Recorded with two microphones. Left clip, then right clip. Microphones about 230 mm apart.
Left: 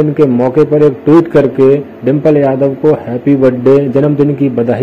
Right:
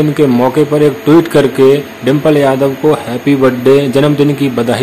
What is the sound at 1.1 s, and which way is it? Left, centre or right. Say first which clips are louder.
A man's voice: even; centre.